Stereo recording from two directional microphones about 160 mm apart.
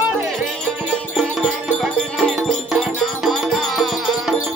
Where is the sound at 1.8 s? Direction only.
Centre (ahead or behind).